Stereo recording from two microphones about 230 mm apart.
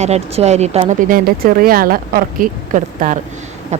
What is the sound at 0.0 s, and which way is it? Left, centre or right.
Speech, right.